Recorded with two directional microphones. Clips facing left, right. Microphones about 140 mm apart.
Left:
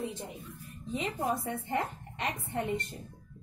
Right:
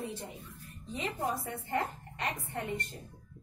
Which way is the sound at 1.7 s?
20° left (ahead or behind).